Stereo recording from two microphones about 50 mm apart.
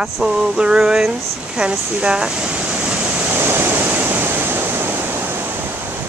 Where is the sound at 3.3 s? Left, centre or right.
Right.